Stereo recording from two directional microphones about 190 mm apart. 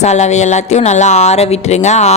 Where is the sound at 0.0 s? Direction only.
35° left (ahead or behind).